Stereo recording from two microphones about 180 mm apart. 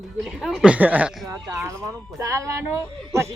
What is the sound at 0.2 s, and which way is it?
Speech, centre (ahead or behind).